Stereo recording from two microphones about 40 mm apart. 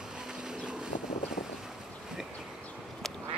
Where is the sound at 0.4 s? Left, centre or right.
Centre.